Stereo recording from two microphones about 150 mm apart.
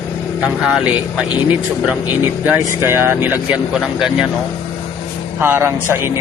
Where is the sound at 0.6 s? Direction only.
5° right (ahead or behind).